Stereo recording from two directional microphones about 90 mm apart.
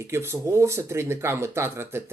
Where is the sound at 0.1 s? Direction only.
30° right (ahead or behind).